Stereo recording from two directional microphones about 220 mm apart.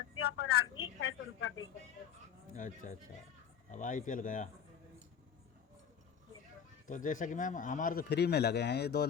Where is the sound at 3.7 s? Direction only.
35° left (ahead or behind).